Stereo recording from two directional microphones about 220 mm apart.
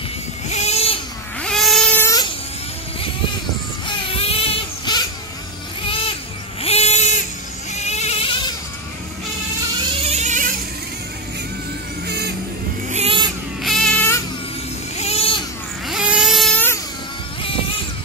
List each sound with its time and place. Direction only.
0.5 s goat: 30° left (ahead or behind)
1.4 s a sound: centre (ahead or behind)
3.8 s baby cry: 25° left (ahead or behind)
5.9 s vehicle: 25° left (ahead or behind)
6.6 s bleat: 30° left (ahead or behind)
7.7 s goat: 30° left (ahead or behind)
10.0 s a sound: 30° right (ahead or behind)
12.1 s vehicle: 50° right (ahead or behind)
12.9 s vehicle: 25° right (ahead or behind)
13.6 s baby cry: centre (ahead or behind)
15.0 s a sound: 25° left (ahead or behind)
15.9 s vehicle: 5° right (ahead or behind)